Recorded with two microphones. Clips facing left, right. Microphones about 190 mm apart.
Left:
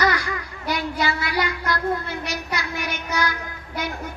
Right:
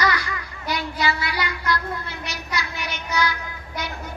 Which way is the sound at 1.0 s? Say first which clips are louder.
Even; 50° left (ahead or behind).